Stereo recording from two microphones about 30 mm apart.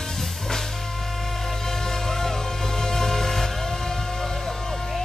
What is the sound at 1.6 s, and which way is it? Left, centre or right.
Music, centre.